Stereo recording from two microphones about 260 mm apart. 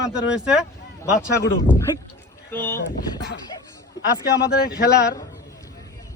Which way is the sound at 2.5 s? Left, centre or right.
Centre.